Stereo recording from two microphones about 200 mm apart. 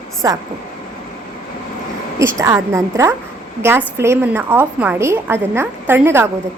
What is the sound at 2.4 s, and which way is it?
A woman's voice, 15° right (ahead or behind).